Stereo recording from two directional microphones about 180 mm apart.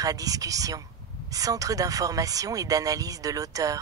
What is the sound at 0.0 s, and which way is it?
Speech, 20° right (ahead or behind).